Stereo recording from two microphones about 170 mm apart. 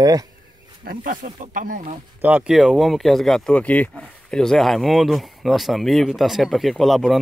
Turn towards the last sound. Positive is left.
turn(degrees=0)  # may be behind; listen again after turning